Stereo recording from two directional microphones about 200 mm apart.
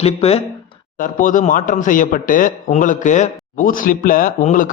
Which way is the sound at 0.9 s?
40° left (ahead or behind).